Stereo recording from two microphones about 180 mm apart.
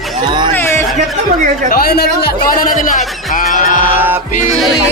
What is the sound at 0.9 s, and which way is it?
Speech, 40° right (ahead or behind).